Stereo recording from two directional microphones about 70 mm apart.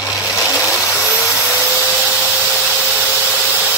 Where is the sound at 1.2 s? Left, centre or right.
Centre.